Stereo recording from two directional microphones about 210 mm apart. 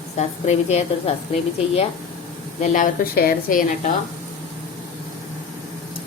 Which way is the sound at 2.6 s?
35° left (ahead or behind).